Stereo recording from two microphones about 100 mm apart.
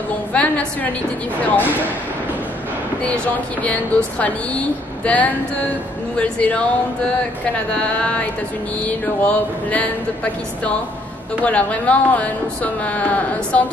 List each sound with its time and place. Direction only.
0.3 s a sound: 10° left (ahead or behind)
1.4 s speech: 15° left (ahead or behind)
3.6 s speech: 15° left (ahead or behind)
7.7 s speech: 10° left (ahead or behind)
11.4 s speech: 15° left (ahead or behind)